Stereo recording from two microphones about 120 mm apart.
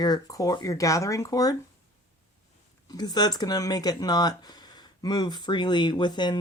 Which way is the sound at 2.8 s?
35° left (ahead or behind).